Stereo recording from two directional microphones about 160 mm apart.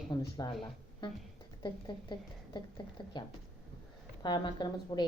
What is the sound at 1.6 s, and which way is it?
A woman's voice, 30° left (ahead or behind).